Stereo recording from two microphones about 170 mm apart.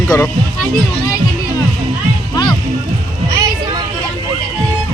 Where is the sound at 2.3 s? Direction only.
25° left (ahead or behind).